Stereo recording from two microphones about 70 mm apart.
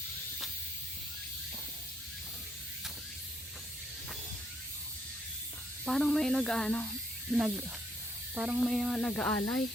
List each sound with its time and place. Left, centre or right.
5.8 s speech: centre
7.3 s speech: centre
8.7 s speech: centre
9.1 s speech: centre